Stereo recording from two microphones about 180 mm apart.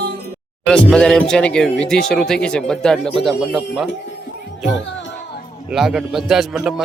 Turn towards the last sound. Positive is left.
turn(degrees=-5)  # may be behind; listen again after turning